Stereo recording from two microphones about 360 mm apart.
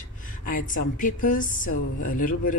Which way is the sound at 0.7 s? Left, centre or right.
Left.